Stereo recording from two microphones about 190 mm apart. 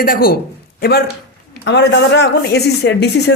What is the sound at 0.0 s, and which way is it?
A man's voice, 50° left (ahead or behind).